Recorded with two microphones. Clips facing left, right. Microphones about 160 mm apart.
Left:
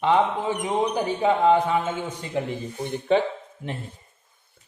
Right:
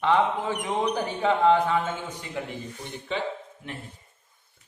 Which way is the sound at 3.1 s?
50° left (ahead or behind).